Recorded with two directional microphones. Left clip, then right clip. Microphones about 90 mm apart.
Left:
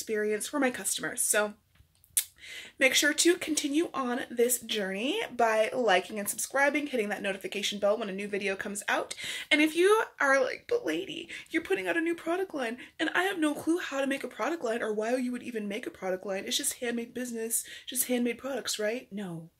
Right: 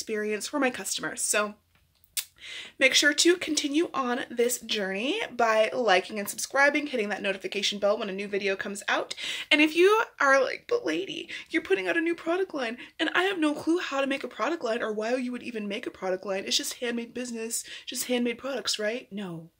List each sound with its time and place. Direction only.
0.1 s speech: 10° right (ahead or behind)
2.8 s speech: 10° right (ahead or behind)